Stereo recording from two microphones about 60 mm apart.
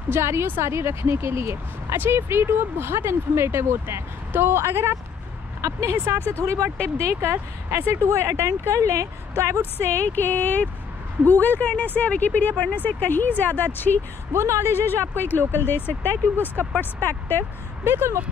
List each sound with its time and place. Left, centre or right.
0.1 s speech: right
5.6 s speech: right
5.9 s speech: right
6.4 s speech: right
9.6 s speech: left
14.3 s speech: right
14.7 s speech: left
17.8 s speech: right